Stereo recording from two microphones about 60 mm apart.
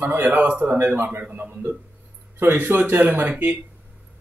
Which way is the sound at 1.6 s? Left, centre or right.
Right.